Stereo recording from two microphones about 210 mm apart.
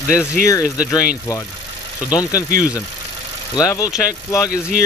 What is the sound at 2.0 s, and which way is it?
Speech, 20° left (ahead or behind).